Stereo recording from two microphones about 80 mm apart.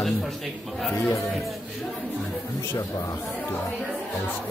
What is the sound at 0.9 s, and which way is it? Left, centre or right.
Speech, left.